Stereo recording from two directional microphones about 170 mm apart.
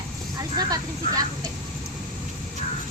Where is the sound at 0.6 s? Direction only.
20° right (ahead or behind).